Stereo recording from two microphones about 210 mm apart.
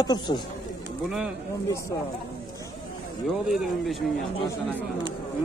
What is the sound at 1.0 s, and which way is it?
Speech, 5° right (ahead or behind).